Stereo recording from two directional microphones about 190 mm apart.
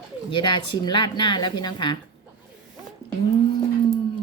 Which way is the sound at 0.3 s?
25° left (ahead or behind).